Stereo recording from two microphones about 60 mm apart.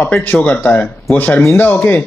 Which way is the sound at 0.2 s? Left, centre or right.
Left.